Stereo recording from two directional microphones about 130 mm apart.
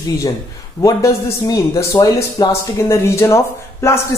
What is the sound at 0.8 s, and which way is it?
A man's voice, 25° left (ahead or behind).